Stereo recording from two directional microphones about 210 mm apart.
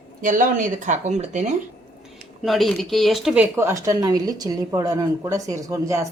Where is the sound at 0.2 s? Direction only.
40° right (ahead or behind).